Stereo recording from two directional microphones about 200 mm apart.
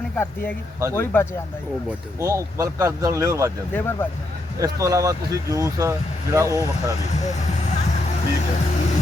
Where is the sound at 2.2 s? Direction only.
15° right (ahead or behind).